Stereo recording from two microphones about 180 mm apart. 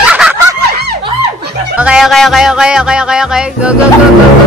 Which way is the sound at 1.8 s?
5° right (ahead or behind).